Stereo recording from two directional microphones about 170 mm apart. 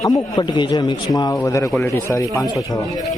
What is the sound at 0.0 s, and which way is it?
A man's voice, 20° left (ahead or behind).